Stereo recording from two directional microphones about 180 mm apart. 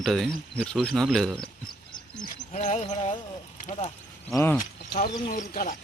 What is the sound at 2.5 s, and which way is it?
Speech, 40° left (ahead or behind).